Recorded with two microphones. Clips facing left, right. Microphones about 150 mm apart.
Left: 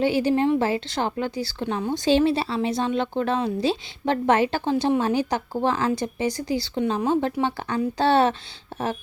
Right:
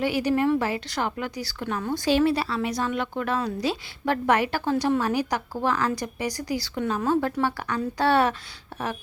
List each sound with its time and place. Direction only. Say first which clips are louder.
0.0 s a woman's voice: left 2 dB; 25° left (ahead or behind)